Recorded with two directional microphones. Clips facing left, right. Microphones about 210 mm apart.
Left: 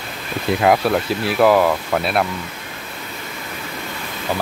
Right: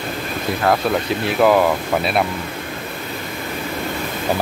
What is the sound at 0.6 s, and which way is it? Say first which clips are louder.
Speech: left 2 dB; 10° left (ahead or behind).